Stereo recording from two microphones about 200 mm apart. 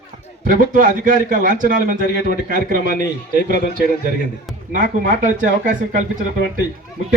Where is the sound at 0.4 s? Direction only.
45° right (ahead or behind).